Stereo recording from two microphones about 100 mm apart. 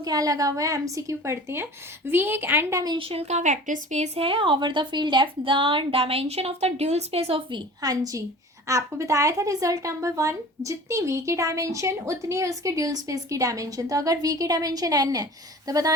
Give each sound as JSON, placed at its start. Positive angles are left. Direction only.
{"t": 0.0, "sound": "a woman's voice", "side_deg": -35}
{"t": 3.0, "sound": "speech", "side_deg": -80}
{"t": 4.1, "sound": "a woman's voice", "side_deg": -65}
{"t": 7.8, "sound": "speech", "side_deg": -40}